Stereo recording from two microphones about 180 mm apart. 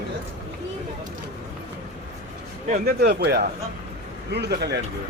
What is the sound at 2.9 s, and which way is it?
Speech, 60° right (ahead or behind).